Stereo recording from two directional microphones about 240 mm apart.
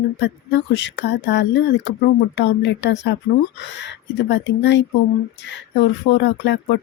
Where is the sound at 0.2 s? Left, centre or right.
Left.